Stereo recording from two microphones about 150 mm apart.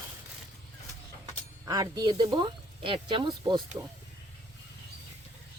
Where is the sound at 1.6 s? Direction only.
25° right (ahead or behind).